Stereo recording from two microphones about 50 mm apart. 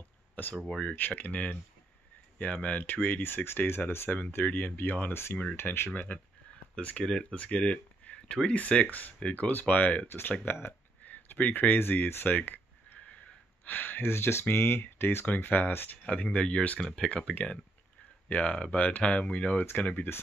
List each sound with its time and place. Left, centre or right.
0.4 s speech: left
4.5 s speech: left
5.1 s speech: left
6.8 s speech: left
7.1 s speech: centre
7.3 s speech: left
10.0 s speech: left
12.3 s a sound: left
13.7 s speech: left
15.2 s speech: left
16.0 s speech: left
16.8 s speech: centre